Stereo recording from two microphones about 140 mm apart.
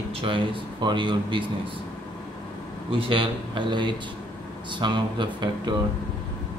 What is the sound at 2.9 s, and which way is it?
Speech, 40° right (ahead or behind).